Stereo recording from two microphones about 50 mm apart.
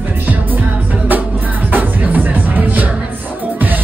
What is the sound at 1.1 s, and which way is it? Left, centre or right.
Music, right.